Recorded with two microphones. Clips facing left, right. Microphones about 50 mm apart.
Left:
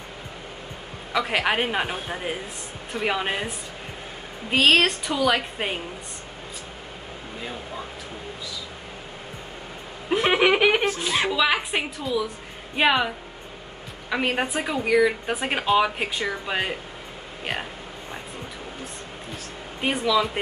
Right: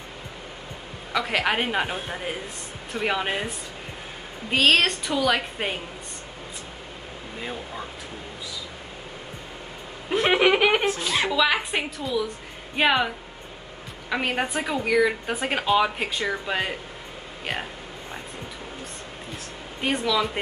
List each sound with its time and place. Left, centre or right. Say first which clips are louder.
1.1 s speech: left 1 dB; centre
4.5 s speech: left 1 dB; centre
10.2 s speech: even; centre
14.1 s speech: left 1 dB; centre
19.8 s speech: left 2 dB; centre